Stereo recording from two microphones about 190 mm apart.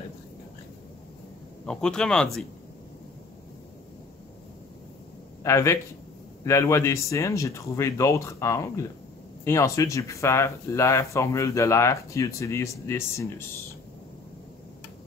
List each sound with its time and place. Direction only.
1.7 s speech: 5° left (ahead or behind)
5.4 s speech: 15° left (ahead or behind)